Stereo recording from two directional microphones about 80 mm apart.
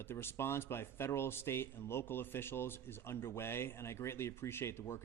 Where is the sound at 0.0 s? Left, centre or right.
Left.